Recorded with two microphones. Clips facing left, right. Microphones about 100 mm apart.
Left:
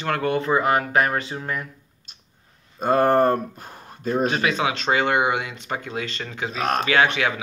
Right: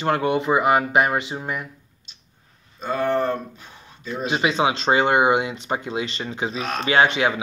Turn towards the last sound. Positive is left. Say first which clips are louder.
# right 2 dB
turn(degrees=-25)  # may be behind; listen again after turning